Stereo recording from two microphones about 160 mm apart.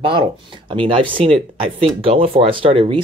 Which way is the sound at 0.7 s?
30° right (ahead or behind).